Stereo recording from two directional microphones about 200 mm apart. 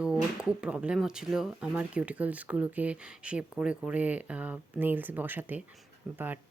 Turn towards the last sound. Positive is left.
turn(degrees=-10)  # may be behind; listen again after turning